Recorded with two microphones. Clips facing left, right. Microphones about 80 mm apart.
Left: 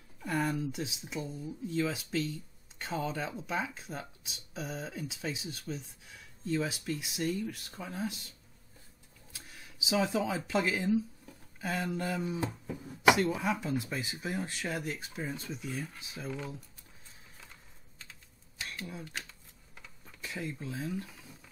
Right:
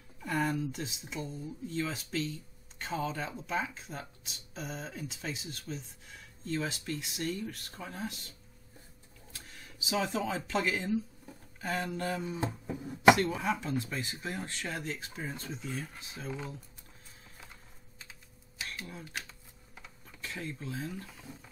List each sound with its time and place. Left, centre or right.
0.2 s speech: centre
9.5 s speech: centre
12.4 s a sound: centre
13.1 s speech: centre
19.0 s a sound: centre
20.2 s speech: centre